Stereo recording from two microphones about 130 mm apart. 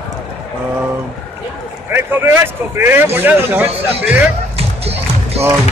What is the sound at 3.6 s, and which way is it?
Speech, 50° right (ahead or behind).